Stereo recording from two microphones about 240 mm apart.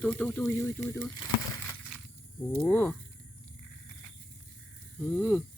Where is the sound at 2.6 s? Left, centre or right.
Centre.